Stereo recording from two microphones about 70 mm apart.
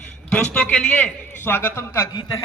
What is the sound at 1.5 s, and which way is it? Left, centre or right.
Speech, left.